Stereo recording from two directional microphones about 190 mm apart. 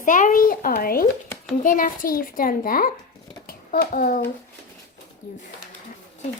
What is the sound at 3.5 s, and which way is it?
Hands, 55° left (ahead or behind).